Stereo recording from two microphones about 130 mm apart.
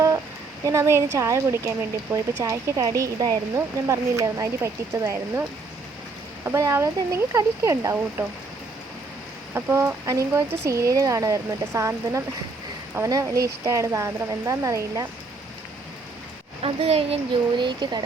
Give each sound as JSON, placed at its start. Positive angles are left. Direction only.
{"t": 0.6, "sound": "speech", "side_deg": -25}
{"t": 9.6, "sound": "speech", "side_deg": -20}
{"t": 16.6, "sound": "a child's voice", "side_deg": -45}
{"t": 17.6, "sound": "speech", "side_deg": -35}